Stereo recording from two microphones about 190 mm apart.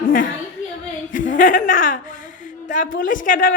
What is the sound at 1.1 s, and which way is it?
Speech, 45° left (ahead or behind).